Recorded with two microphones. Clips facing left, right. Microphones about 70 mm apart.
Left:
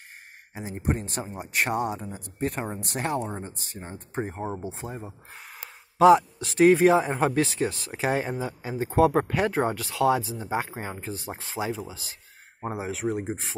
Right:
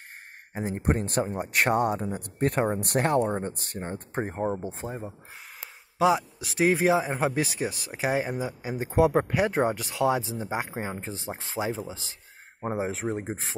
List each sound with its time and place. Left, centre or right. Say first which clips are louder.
0.6 s speech: right 2 dB; right
4.4 s speech: right 4 dB; centre
4.8 s speech: right 2 dB; right
5.9 s speech: left 6 dB; centre; by 11.5 s right
12.7 s speech: even; right